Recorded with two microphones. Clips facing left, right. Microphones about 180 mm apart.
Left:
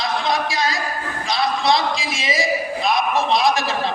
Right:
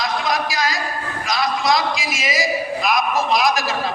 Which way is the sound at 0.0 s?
25° left (ahead or behind).